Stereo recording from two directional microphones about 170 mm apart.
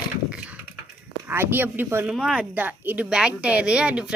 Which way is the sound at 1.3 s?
10° right (ahead or behind).